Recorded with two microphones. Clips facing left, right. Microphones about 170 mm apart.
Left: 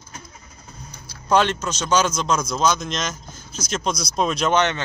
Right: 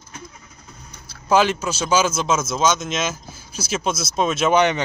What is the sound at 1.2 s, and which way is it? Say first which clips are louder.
Speech: right 1 dB; 5° right (ahead or behind).